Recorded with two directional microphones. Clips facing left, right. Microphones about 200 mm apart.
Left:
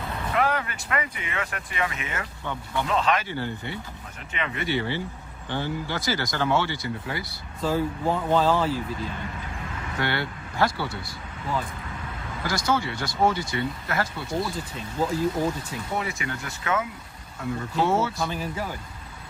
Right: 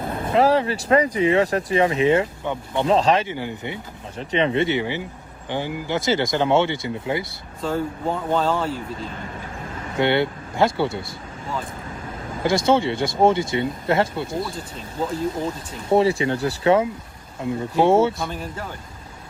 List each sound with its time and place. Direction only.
0.0 s vehicle: 50° right (ahead or behind)
0.3 s speech: 30° right (ahead or behind)
2.9 s speech: 35° right (ahead or behind)
3.2 s speech: 15° right (ahead or behind)
4.2 s speech: 30° right (ahead or behind)
7.6 s speech: centre (ahead or behind)
10.0 s speech: 25° right (ahead or behind)
12.4 s speech: 25° right (ahead or behind)
15.9 s speech: 30° right (ahead or behind)
18.3 s speech: 5° left (ahead or behind)